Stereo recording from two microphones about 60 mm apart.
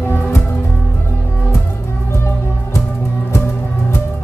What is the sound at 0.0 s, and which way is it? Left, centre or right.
Music, left.